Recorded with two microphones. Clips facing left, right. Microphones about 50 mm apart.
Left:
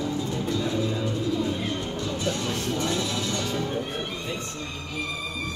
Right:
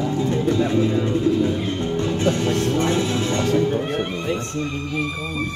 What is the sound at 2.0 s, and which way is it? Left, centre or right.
Music, right.